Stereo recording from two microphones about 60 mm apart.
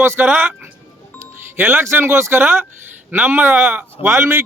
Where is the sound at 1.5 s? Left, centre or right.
Right.